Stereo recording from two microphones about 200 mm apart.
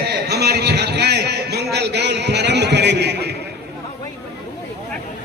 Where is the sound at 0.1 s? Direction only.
55° right (ahead or behind).